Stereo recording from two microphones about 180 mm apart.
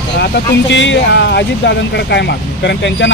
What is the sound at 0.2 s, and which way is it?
Speech, 70° left (ahead or behind).